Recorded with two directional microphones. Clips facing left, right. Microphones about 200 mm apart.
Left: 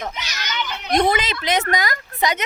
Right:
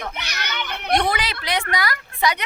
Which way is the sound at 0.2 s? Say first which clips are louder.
Left 2 dB; 60° right (ahead or behind).